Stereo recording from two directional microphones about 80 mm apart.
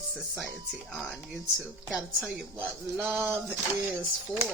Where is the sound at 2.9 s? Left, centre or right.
Right.